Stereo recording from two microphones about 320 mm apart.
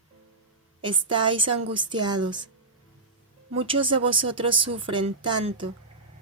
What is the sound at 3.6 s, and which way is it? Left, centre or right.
Speech, centre.